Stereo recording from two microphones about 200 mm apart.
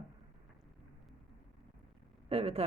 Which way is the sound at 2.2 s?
30° right (ahead or behind).